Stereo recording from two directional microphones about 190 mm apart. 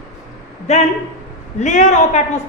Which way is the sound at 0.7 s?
35° left (ahead or behind).